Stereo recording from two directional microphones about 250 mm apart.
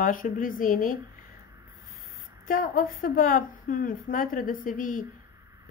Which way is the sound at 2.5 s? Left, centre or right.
Left.